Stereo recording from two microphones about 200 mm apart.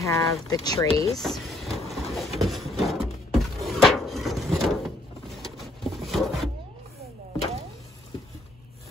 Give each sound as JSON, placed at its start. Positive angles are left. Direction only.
{"t": 0.0, "sound": "speech", "side_deg": 15}
{"t": 1.1, "sound": "vehicle", "side_deg": 0}
{"t": 2.1, "sound": "a sound", "side_deg": 0}